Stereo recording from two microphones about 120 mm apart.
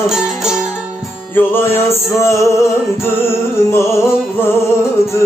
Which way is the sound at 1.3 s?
20° left (ahead or behind).